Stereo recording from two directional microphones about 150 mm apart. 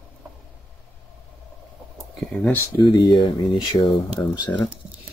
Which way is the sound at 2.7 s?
30° left (ahead or behind).